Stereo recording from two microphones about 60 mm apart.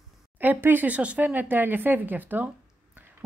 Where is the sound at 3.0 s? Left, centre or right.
Right.